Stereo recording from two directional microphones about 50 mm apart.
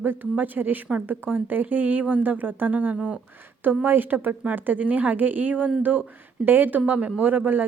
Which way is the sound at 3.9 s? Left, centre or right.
Right.